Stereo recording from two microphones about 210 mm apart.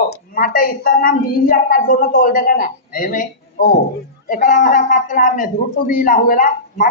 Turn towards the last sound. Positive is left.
turn(degrees=40)  # may be behind; listen again after turning